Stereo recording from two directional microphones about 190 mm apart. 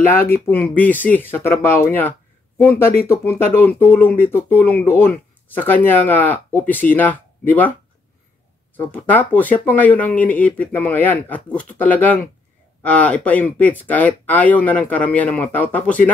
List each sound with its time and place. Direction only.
0.2 s speech: 55° left (ahead or behind)
0.7 s speech: 10° left (ahead or behind)
8.7 s speech: 10° left (ahead or behind)